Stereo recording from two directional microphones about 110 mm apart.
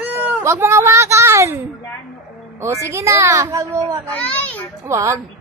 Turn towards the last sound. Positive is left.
turn(degrees=-25)  # may be behind; listen again after turning